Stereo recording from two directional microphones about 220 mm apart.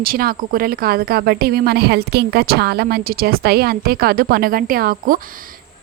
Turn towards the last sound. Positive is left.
turn(degrees=-40)  # may be behind; listen again after turning